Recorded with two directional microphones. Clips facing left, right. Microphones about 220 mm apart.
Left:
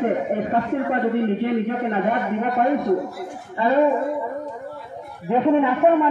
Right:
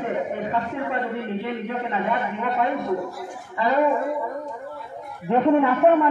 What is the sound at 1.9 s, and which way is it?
Speech, 45° left (ahead or behind).